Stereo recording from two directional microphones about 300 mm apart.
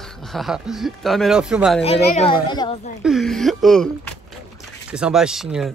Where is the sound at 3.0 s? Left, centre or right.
Centre.